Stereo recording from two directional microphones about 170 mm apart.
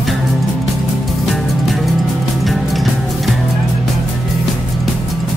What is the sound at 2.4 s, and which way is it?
Music, centre (ahead or behind).